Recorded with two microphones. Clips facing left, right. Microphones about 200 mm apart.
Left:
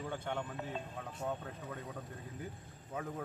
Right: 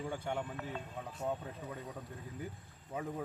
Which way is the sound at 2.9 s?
10° right (ahead or behind).